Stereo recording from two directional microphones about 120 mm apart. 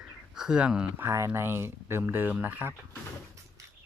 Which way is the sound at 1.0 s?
25° right (ahead or behind).